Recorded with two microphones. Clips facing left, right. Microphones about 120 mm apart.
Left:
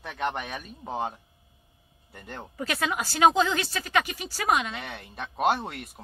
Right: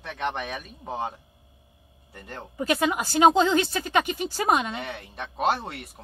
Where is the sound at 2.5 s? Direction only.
20° right (ahead or behind).